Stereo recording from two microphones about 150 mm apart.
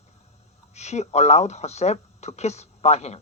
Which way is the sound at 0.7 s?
50° left (ahead or behind).